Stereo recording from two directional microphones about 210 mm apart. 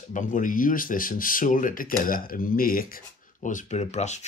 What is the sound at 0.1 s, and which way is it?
Speech, 40° left (ahead or behind).